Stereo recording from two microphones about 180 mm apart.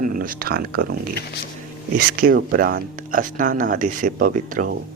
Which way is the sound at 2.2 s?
50° right (ahead or behind).